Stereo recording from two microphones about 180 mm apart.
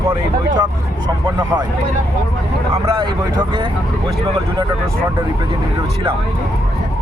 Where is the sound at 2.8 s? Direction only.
25° right (ahead or behind).